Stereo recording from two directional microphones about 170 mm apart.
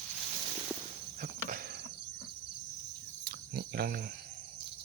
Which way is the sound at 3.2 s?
70° right (ahead or behind).